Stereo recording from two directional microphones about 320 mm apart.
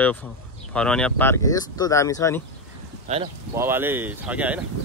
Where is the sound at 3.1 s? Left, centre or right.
Right.